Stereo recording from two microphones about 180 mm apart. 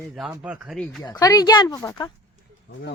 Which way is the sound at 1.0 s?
20° left (ahead or behind).